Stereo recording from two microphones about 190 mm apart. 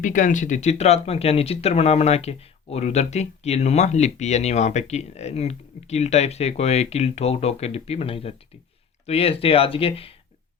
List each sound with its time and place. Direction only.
0.0 s speech: 45° left (ahead or behind)